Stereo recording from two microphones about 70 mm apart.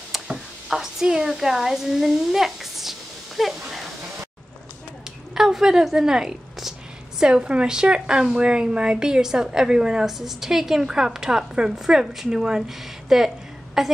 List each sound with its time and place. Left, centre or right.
0.1 s speech: centre
5.3 s a woman's voice: centre